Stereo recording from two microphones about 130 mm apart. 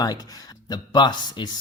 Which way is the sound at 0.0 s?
30° left (ahead or behind).